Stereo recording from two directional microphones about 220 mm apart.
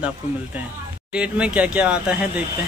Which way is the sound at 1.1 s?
5° right (ahead or behind).